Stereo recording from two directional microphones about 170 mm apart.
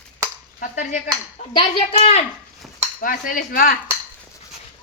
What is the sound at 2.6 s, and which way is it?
Dishes, centre (ahead or behind).